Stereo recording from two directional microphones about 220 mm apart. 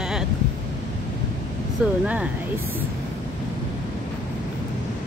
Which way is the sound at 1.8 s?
5° right (ahead or behind).